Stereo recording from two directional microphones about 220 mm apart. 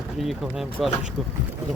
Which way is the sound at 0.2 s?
Centre (ahead or behind).